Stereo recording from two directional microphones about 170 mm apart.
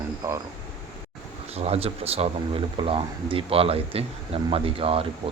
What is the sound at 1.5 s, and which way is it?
Speech, 35° right (ahead or behind).